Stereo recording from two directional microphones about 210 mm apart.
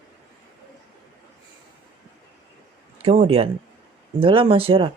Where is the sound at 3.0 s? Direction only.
30° right (ahead or behind).